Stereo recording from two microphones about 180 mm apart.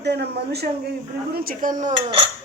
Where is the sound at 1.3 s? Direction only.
55° right (ahead or behind).